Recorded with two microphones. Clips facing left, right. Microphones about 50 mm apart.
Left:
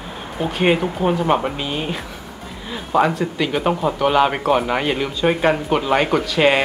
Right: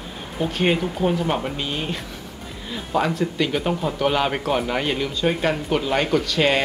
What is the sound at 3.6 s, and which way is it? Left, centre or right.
Speech, left.